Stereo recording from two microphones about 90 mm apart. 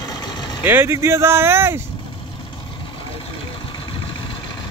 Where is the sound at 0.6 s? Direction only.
25° right (ahead or behind).